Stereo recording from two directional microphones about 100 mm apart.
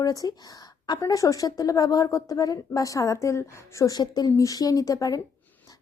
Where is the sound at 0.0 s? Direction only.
35° left (ahead or behind).